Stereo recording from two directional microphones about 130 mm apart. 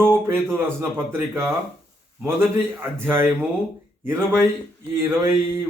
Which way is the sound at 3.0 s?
15° right (ahead or behind).